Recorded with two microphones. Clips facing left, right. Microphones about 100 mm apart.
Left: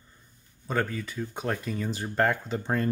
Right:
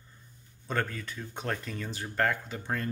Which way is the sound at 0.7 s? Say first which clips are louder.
Left 3 dB; 5° left (ahead or behind).